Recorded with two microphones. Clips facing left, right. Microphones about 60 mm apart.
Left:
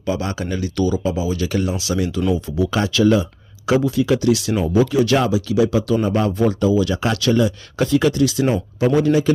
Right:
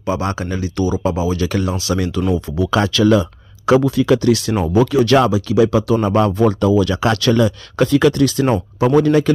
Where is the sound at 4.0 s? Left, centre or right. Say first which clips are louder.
Right 3 dB; right.